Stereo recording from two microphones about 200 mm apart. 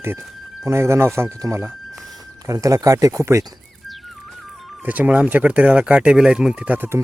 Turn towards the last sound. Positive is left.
turn(degrees=-10)  # may be behind; listen again after turning